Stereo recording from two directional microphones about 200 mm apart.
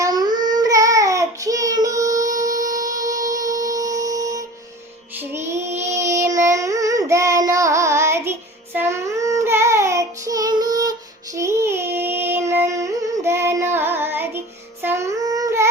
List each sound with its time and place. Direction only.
0.0 s child singing: 20° right (ahead or behind)
5.1 s music: 15° right (ahead or behind)
5.8 s child singing: 15° right (ahead or behind)
11.3 s a sound: 15° right (ahead or behind)